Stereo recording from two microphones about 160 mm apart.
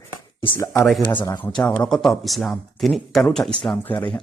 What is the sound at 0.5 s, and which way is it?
Speech, 15° left (ahead or behind).